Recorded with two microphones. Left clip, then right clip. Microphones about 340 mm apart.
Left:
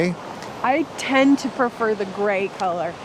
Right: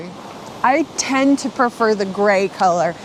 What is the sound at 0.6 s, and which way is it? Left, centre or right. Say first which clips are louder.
Speech: right 5 dB; centre.